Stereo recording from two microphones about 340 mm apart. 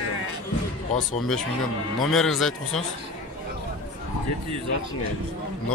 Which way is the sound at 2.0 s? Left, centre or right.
Centre.